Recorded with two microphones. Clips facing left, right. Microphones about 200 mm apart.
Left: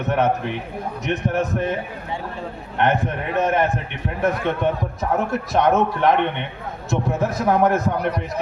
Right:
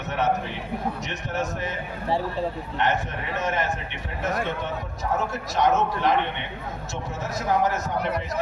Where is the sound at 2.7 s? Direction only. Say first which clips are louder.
Left 7 dB; 55° left (ahead or behind).